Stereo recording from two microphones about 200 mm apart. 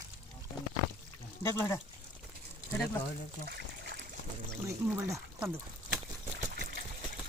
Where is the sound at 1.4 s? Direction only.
15° left (ahead or behind).